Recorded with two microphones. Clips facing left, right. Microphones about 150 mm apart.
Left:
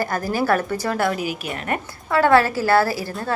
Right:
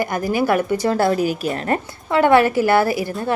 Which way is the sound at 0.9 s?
30° right (ahead or behind).